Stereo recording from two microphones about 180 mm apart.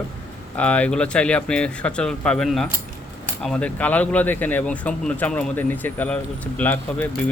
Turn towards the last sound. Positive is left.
turn(degrees=10)  # may be behind; listen again after turning